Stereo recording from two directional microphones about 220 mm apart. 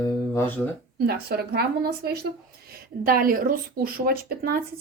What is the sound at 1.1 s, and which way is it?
Speech, 45° right (ahead or behind).